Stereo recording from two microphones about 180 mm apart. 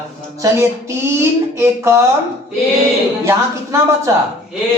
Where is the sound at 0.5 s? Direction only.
15° right (ahead or behind).